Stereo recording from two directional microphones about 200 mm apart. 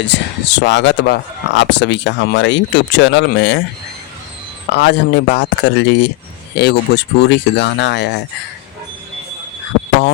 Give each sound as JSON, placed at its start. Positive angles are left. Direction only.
{"t": 0.0, "sound": "speech", "side_deg": 60}
{"t": 4.7, "sound": "speech", "side_deg": 60}